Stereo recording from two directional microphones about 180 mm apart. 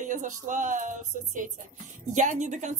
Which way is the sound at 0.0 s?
45° right (ahead or behind).